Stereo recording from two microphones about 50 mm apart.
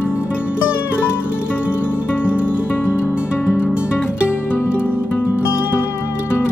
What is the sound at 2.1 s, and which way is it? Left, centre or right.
Music, left.